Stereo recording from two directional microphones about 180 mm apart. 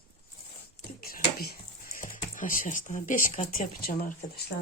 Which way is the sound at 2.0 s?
50° left (ahead or behind).